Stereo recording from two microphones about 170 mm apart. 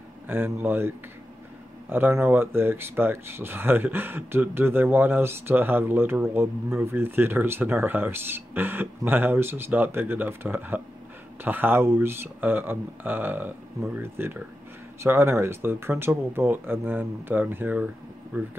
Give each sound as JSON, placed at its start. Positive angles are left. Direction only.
{"t": 0.3, "sound": "speech", "side_deg": -10}